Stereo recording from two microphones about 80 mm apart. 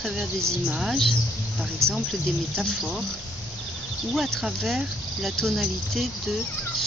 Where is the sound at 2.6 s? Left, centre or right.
Centre.